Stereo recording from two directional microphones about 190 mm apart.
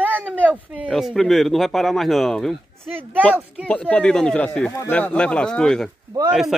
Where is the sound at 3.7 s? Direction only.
5° left (ahead or behind).